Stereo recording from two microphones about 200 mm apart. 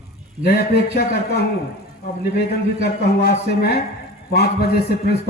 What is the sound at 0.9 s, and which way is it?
A man's voice, 55° left (ahead or behind).